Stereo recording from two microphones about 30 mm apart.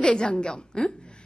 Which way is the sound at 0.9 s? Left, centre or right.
Left.